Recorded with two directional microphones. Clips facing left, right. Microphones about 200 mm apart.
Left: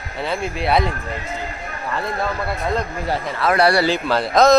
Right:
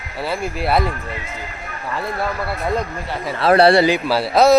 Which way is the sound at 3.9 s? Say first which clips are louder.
Right 2 dB; 10° right (ahead or behind).